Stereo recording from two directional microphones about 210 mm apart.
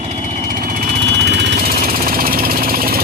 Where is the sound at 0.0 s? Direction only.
35° right (ahead or behind).